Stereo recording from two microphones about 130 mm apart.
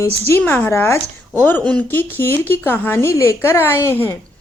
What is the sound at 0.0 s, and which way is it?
A woman's voice, 20° left (ahead or behind).